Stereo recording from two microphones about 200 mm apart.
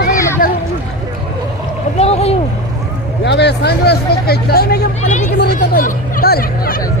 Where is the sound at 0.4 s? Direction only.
40° left (ahead or behind).